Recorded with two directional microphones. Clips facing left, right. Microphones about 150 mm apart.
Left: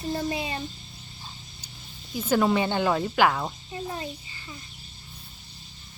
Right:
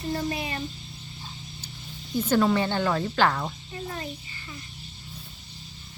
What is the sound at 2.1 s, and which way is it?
Speech, 10° left (ahead or behind).